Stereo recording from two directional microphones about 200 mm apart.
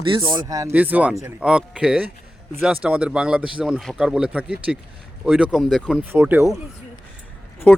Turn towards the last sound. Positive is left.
turn(degrees=5)  # may be behind; listen again after turning